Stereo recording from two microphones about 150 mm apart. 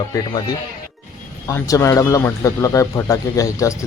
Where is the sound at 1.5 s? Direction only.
20° left (ahead or behind).